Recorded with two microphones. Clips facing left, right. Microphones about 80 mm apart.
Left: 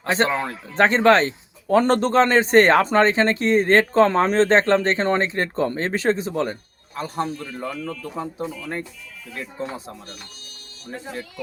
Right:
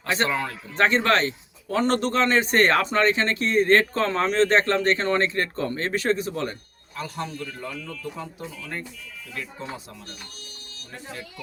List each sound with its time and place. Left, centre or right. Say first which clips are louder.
0.0 s speech: left 4 dB; left